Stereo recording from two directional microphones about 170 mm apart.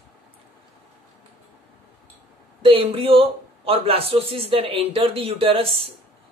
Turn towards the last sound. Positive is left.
turn(degrees=-35)  # may be behind; listen again after turning